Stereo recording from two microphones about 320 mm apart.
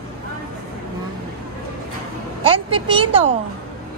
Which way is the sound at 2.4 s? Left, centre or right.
Centre.